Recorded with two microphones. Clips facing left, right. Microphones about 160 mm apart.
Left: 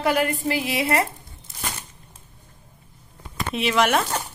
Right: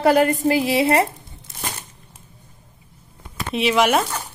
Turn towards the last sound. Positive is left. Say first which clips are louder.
# right 3 dB
turn(degrees=-5)  # may be behind; listen again after turning